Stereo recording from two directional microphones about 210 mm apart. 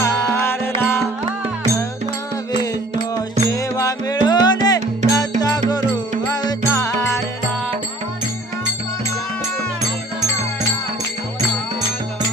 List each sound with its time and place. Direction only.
0.0 s music: 15° left (ahead or behind)
3.2 s music: 15° left (ahead or behind)